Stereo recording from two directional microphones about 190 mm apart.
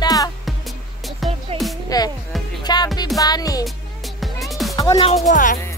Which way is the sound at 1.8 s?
20° left (ahead or behind).